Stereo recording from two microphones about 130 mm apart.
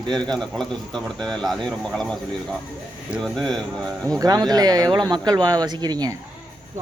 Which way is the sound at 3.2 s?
Centre (ahead or behind).